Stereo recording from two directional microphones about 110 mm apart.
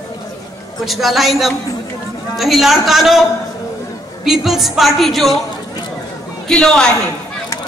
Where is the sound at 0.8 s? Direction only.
Centre (ahead or behind).